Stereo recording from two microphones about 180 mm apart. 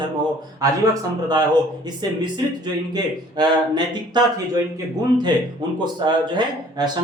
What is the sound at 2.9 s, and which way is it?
A man's voice, 25° right (ahead or behind).